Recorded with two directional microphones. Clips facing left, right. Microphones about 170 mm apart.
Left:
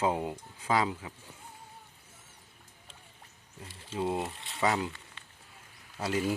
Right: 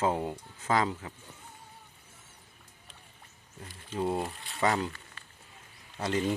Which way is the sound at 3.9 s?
Centre (ahead or behind).